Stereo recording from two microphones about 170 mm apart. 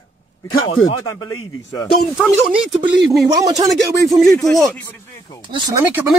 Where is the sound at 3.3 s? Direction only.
20° right (ahead or behind).